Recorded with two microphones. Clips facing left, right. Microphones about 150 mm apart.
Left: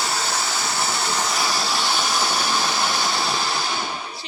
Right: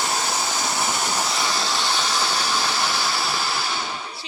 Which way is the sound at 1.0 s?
15° right (ahead or behind).